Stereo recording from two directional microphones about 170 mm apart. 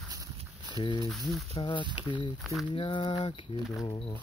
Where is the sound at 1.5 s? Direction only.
25° left (ahead or behind).